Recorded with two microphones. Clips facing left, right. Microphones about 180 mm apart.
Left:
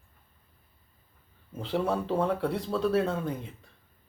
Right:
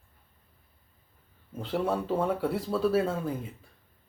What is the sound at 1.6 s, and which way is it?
Speech, centre (ahead or behind).